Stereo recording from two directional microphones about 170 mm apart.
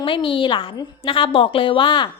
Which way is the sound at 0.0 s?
30° left (ahead or behind).